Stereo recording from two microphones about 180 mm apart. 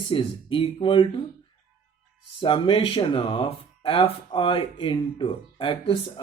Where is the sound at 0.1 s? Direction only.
30° left (ahead or behind).